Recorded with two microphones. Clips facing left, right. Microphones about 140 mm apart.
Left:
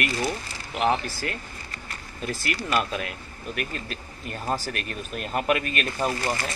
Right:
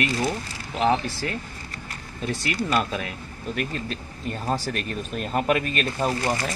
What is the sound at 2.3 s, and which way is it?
Speech, centre (ahead or behind).